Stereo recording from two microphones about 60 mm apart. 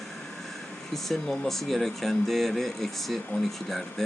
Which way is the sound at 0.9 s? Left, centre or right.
Centre.